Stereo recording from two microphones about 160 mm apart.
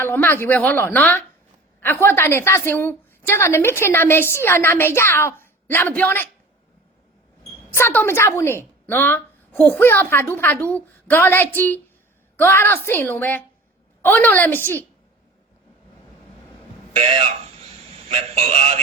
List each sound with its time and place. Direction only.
0.0 s a woman's voice: 15° left (ahead or behind)
7.7 s a woman's voice: 15° left (ahead or behind)
16.9 s a man's voice: 35° right (ahead or behind)